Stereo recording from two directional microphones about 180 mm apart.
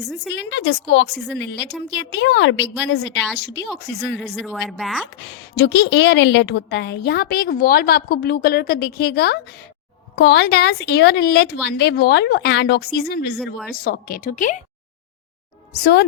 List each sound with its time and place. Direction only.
0.3 s a woman's voice: 80° left
3.3 s a woman's voice: 70° left (ahead or behind)
4.2 s a woman's voice: centre (ahead or behind)
5.1 s a woman's voice: 75° left (ahead or behind); by 14.6 s 45° left (ahead or behind)
15.7 s a woman's voice: 65° left (ahead or behind)